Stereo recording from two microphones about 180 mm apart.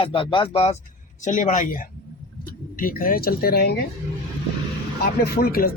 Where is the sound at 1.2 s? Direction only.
45° left (ahead or behind).